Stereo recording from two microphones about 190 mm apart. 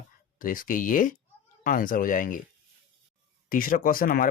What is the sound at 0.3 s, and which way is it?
Speech, 45° left (ahead or behind).